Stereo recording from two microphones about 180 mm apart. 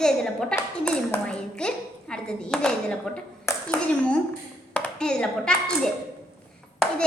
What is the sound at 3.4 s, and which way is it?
Clapping, 10° left (ahead or behind).